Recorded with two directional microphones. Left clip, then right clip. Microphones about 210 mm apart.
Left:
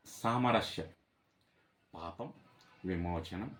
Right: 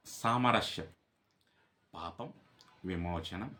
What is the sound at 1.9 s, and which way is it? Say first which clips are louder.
Speech: right 1 dB; 10° right (ahead or behind).